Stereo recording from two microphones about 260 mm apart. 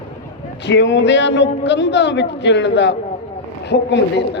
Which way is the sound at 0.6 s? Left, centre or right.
Left.